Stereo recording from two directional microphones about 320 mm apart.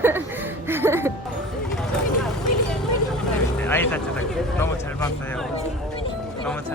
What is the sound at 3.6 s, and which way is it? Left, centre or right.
Speech, centre.